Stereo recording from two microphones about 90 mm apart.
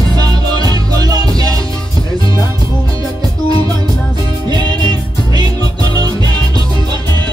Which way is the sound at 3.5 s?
45° right (ahead or behind).